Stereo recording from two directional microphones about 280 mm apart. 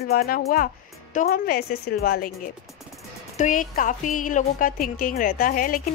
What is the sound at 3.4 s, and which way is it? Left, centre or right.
A woman's voice, left.